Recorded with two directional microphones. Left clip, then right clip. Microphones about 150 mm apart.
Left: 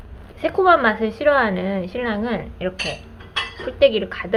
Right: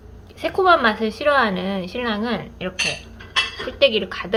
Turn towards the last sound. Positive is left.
turn(degrees=-10)  # may be behind; listen again after turning